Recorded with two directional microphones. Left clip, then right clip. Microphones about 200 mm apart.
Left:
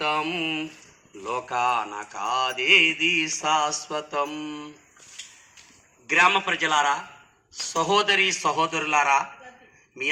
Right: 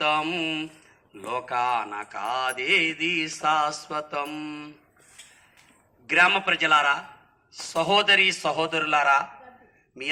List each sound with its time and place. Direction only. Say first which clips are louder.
0.0 s a sound: right 1 dB; 25° right (ahead or behind)
1.3 s mantra: left 1 dB; 20° right (ahead or behind)
6.1 s mantra: even; 25° right (ahead or behind)